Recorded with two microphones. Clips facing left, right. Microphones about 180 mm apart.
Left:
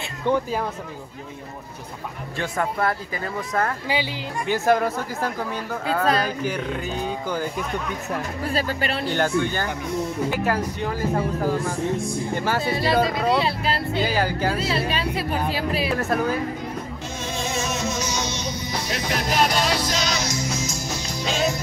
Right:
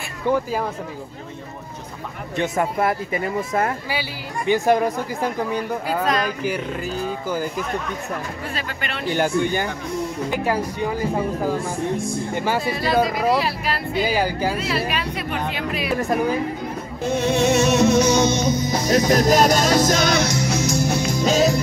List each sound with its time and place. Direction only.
0.3 s speech: 5° right (ahead or behind)
2.3 s speech: 20° right (ahead or behind)
6.0 s speech: 30° left (ahead or behind)
6.4 s speech: 5° right (ahead or behind)
8.5 s speech: 35° left (ahead or behind)
9.1 s speech: 15° right (ahead or behind)
12.6 s a woman's voice: 25° left (ahead or behind)
14.0 s speech: 10° right (ahead or behind)
14.6 s a woman's voice: 30° left (ahead or behind)
16.0 s speech: 15° right (ahead or behind)
17.1 s music: 65° right (ahead or behind); by 21.5 s 45° right (ahead or behind)